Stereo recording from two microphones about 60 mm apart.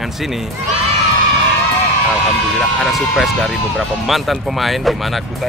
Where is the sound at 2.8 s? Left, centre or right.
Centre.